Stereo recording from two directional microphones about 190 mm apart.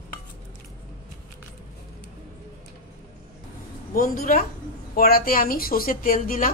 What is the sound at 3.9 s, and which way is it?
Speech, 45° left (ahead or behind).